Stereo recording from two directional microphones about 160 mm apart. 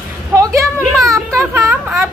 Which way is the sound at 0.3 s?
20° right (ahead or behind).